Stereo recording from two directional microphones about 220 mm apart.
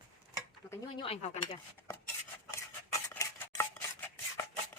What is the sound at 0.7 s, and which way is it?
Speech, 25° left (ahead or behind).